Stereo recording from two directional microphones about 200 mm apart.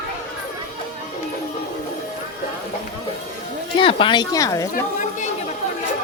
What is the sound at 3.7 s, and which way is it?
Speech, 25° left (ahead or behind).